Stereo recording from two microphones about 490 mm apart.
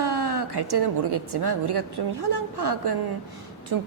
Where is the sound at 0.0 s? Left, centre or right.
Right.